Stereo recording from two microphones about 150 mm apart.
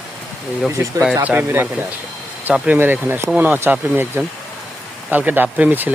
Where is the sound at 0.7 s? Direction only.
20° right (ahead or behind).